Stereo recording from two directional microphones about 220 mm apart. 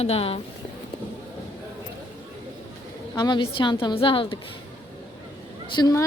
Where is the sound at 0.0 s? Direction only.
25° left (ahead or behind).